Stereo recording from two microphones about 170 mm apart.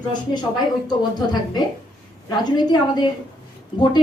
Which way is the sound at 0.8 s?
25° left (ahead or behind).